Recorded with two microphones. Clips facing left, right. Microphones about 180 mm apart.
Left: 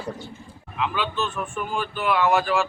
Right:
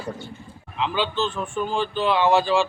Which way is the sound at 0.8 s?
30° right (ahead or behind).